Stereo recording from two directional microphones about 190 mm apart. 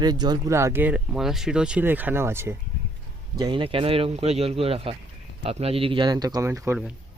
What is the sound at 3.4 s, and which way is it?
Speech, 25° right (ahead or behind).